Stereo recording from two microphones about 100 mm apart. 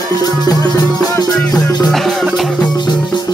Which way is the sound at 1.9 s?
Centre (ahead or behind).